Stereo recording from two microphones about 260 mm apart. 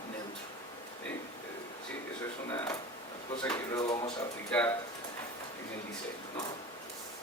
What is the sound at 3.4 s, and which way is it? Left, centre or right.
Drawer open or close, centre.